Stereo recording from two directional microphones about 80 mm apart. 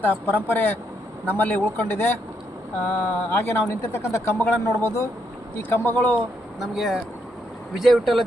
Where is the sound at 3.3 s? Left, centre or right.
Left.